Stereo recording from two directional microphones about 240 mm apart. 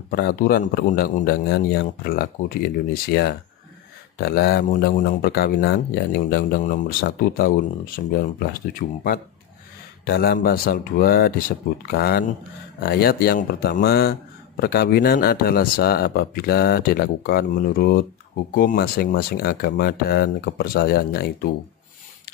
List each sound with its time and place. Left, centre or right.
0.1 s speech: left